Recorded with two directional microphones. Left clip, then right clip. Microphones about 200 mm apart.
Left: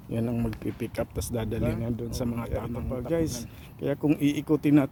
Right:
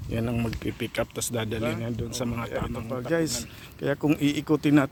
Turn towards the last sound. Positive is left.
turn(degrees=0)  # may be behind; listen again after turning